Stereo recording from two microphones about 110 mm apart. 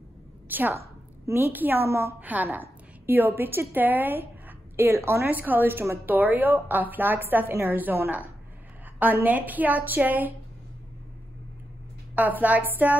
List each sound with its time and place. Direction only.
0.5 s a woman's voice: 15° right (ahead or behind)
12.2 s a woman's voice: 15° right (ahead or behind)